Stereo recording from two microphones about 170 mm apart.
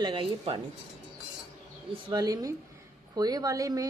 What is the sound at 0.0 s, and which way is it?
Speech, 30° right (ahead or behind).